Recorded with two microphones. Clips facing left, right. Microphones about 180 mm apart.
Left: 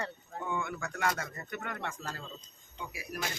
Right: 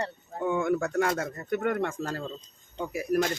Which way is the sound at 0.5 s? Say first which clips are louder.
Right 12 dB; 45° right (ahead or behind).